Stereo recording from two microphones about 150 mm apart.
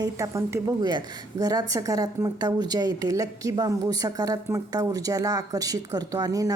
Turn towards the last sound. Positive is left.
turn(degrees=-25)  # may be behind; listen again after turning